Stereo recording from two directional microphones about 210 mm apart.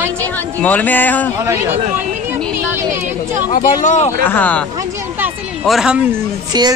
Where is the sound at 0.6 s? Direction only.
10° left (ahead or behind).